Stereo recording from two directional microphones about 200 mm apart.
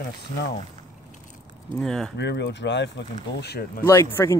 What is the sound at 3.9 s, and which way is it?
Speech, 10° left (ahead or behind).